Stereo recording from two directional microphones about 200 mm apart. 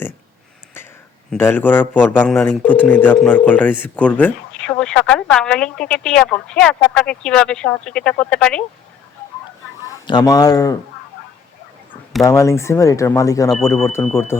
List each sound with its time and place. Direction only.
1.3 s speech: 10° left (ahead or behind)
9.8 s speech: 20° left (ahead or behind)
12.2 s speech: 15° left (ahead or behind)